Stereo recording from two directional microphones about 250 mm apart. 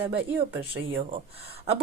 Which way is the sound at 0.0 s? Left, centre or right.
Right.